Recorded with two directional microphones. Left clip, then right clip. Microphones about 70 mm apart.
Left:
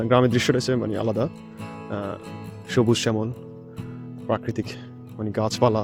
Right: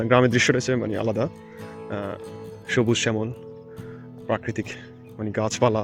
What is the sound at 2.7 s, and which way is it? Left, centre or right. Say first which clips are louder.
Speech: left 1 dB; left.